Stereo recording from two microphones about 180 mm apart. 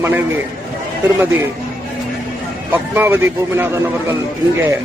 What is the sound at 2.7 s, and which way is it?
Speech, 10° right (ahead or behind).